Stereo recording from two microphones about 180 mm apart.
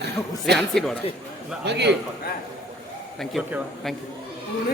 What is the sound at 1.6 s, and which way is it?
Speech, 70° right (ahead or behind).